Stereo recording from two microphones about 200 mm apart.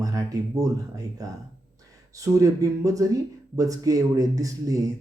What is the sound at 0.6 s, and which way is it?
Speech, 15° right (ahead or behind).